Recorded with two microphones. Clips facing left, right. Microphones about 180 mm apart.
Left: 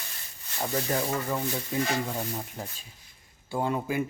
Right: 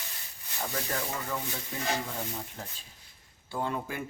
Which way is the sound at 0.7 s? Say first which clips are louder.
Left 7 dB; 20° left (ahead or behind).